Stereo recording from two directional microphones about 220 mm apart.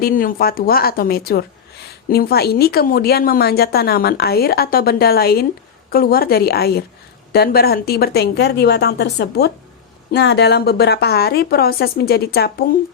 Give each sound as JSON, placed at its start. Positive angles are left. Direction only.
{"t": 0.0, "sound": "a woman's voice", "side_deg": 40}